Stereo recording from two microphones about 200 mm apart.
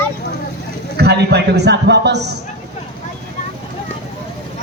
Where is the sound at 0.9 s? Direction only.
55° right (ahead or behind).